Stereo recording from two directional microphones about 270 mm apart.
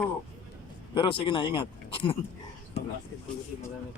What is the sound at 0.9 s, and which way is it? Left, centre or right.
Speech, centre.